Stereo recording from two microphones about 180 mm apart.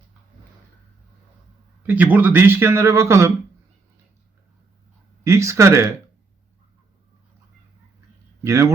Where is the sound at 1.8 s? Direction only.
10° right (ahead or behind).